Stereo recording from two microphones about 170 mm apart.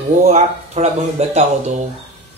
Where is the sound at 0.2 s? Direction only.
40° right (ahead or behind).